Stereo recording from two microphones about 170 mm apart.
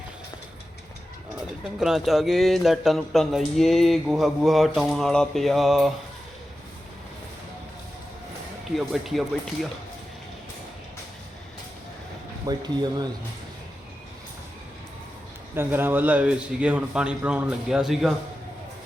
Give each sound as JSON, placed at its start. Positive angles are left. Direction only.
{"t": 1.8, "sound": "speech", "side_deg": 0}
{"t": 8.7, "sound": "speech", "side_deg": 0}
{"t": 12.5, "sound": "speech", "side_deg": -25}
{"t": 15.5, "sound": "a man's voice", "side_deg": -10}